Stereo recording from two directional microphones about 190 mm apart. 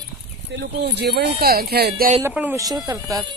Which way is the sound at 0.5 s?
60° right (ahead or behind).